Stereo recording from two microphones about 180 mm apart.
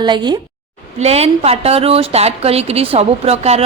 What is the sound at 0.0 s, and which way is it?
Speech, 25° right (ahead or behind).